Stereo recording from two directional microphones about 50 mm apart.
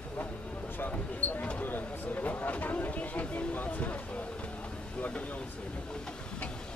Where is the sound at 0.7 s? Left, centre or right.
Left.